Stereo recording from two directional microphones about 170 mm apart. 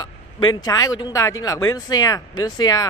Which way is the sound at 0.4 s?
25° left (ahead or behind).